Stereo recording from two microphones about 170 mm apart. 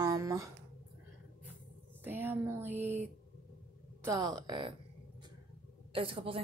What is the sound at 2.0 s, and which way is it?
Speech, 10° right (ahead or behind).